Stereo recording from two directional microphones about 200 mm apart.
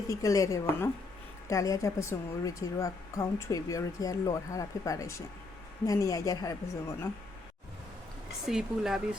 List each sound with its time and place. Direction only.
0.1 s speech: 15° left (ahead or behind)
8.4 s speech: centre (ahead or behind)